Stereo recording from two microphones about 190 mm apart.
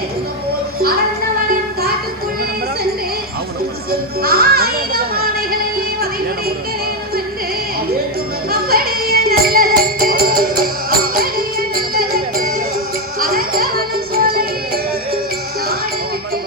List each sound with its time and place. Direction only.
4.2 s music: 50° right (ahead or behind)
8.4 s music: 55° right (ahead or behind)